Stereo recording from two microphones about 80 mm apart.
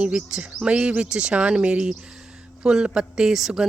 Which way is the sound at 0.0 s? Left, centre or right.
Centre.